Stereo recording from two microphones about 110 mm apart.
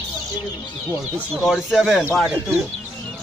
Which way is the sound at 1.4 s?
5° right (ahead or behind).